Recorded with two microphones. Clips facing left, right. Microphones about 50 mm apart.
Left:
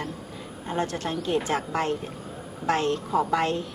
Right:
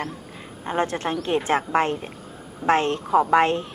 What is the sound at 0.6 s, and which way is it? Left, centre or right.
A woman's voice, right.